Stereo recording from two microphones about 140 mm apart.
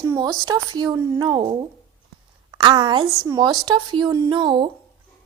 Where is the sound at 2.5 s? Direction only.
35° right (ahead or behind).